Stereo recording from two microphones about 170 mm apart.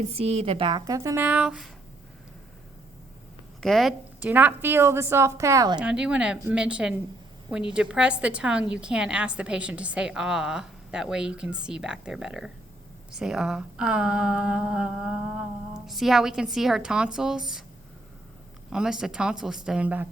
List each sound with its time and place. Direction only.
0.3 s a woman's voice: 35° right (ahead or behind)
0.9 s a woman's voice: 15° right (ahead or behind)
3.6 s a woman's voice: centre (ahead or behind); by 5.8 s 20° right (ahead or behind)
5.8 s a woman's voice: 5° right (ahead or behind)
18.7 s a woman's voice: 5° right (ahead or behind)